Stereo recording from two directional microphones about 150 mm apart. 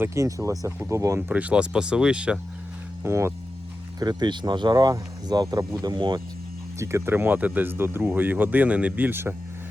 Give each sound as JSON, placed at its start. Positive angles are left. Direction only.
{"t": 0.0, "sound": "speech", "side_deg": -20}
{"t": 3.0, "sound": "speech", "side_deg": -15}
{"t": 4.0, "sound": "speech", "side_deg": -30}
{"t": 6.7, "sound": "speech", "side_deg": -20}